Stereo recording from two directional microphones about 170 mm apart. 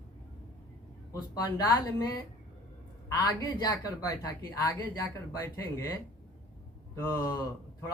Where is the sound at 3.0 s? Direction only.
20° left (ahead or behind).